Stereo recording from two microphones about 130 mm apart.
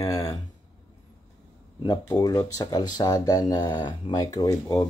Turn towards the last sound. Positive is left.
turn(degrees=25)  # may be behind; listen again after turning